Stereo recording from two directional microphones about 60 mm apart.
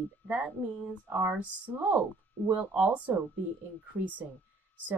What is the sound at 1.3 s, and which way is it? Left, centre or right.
A woman's voice, right.